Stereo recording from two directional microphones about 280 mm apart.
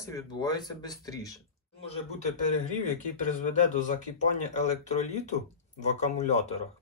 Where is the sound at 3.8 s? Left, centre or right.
Left.